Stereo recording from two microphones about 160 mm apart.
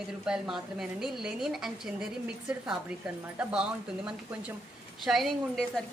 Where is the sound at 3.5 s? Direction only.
5° right (ahead or behind).